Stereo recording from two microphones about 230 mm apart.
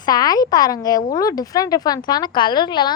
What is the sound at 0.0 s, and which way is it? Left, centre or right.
A woman's voice, centre.